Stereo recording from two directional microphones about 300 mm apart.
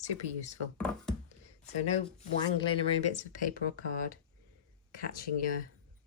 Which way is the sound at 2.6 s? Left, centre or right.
Centre.